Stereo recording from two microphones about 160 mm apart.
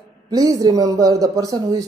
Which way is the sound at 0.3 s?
25° right (ahead or behind).